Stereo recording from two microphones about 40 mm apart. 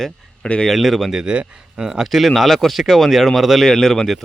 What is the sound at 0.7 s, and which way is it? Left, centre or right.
Speech, centre.